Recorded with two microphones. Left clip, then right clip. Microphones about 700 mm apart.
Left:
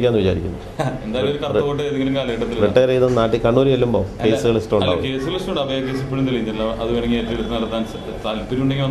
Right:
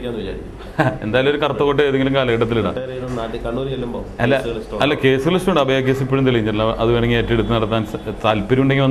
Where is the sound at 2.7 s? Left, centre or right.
Left.